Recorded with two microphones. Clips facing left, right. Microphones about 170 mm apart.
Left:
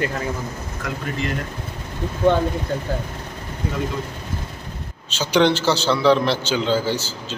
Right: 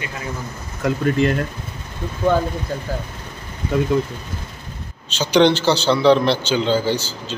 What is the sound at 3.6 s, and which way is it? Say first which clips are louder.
Speech: right 6 dB; 65° left (ahead or behind).